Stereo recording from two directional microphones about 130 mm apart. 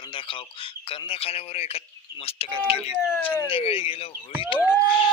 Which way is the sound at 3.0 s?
20° left (ahead or behind).